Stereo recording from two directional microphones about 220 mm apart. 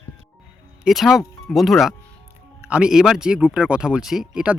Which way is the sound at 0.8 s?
Centre (ahead or behind).